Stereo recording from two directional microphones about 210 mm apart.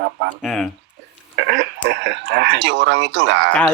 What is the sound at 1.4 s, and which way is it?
Speech, 50° right (ahead or behind).